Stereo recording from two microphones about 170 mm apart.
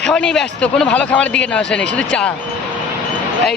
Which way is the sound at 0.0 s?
5° left (ahead or behind).